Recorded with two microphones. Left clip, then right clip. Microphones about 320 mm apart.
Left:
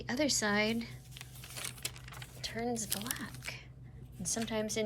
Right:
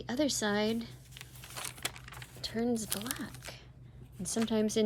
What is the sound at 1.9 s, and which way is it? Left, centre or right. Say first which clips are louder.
Keys jangling: right 1 dB; centre.